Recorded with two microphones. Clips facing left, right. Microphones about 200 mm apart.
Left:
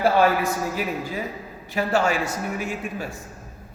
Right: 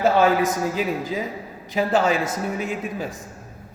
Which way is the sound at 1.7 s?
20° right (ahead or behind).